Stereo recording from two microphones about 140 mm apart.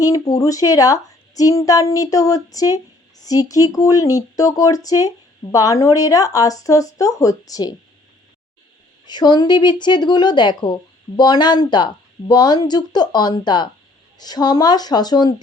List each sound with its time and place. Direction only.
0.0 s speech: 25° left (ahead or behind)
9.0 s speech: 30° left (ahead or behind)